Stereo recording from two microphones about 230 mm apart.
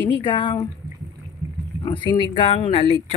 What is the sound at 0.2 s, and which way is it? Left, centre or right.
Speech, left.